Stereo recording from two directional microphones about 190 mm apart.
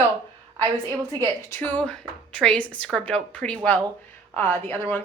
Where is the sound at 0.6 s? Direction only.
20° right (ahead or behind).